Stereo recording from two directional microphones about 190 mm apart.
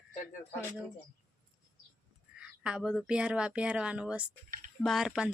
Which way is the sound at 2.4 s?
5° right (ahead or behind).